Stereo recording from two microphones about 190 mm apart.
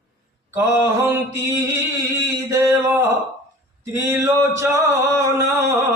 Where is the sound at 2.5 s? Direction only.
15° right (ahead or behind).